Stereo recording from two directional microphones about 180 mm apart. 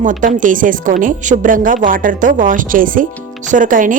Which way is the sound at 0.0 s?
45° right (ahead or behind).